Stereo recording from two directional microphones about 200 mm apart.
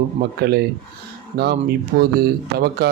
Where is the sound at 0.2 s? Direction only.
55° right (ahead or behind).